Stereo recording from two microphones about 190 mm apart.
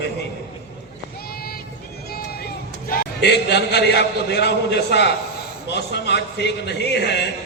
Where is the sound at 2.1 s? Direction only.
55° left (ahead or behind).